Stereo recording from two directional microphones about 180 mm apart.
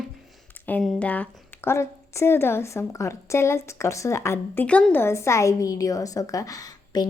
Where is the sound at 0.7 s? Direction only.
5° left (ahead or behind).